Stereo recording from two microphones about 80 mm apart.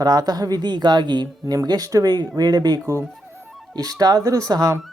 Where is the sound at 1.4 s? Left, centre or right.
Right.